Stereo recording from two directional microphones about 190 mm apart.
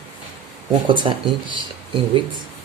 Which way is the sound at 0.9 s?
25° right (ahead or behind).